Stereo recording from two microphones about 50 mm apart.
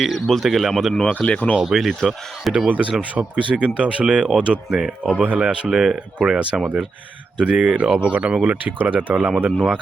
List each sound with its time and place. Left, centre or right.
0.3 s speech: centre
1.2 s speech: left
1.5 s speech: centre
2.5 s speech: centre
4.8 s speech: centre; by 9.3 s right